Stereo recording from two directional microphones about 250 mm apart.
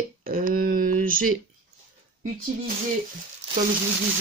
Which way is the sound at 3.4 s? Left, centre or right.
Right.